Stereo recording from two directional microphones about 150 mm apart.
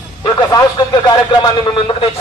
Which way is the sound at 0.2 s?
25° left (ahead or behind).